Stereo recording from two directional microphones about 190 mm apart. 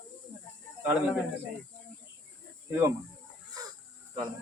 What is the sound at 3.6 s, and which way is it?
Wild animals, 20° right (ahead or behind).